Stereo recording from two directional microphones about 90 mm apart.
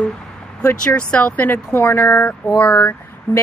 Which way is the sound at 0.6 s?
10° left (ahead or behind).